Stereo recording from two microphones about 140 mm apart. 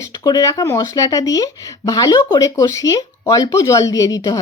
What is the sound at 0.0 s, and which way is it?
Speech, 25° left (ahead or behind).